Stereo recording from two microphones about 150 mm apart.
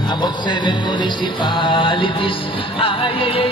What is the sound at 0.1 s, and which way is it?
Music, 30° left (ahead or behind).